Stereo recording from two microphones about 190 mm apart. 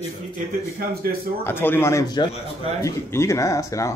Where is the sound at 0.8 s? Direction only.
50° right (ahead or behind).